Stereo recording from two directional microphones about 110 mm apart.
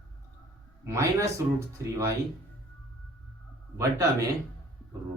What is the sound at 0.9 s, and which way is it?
Speech, 25° right (ahead or behind).